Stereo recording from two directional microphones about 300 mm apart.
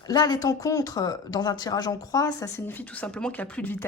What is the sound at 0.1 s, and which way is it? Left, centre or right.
Speech, centre.